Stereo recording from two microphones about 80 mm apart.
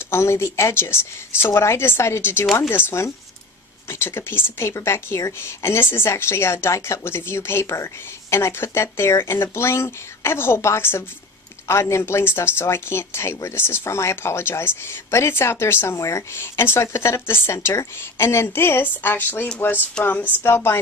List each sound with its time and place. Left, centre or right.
0.1 s speech: left; by 20.2 s centre
20.4 s speech: left